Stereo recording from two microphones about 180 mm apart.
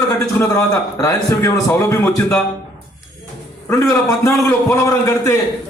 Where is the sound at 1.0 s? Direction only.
15° left (ahead or behind).